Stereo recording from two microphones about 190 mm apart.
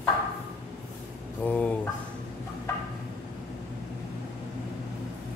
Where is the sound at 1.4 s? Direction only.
10° left (ahead or behind).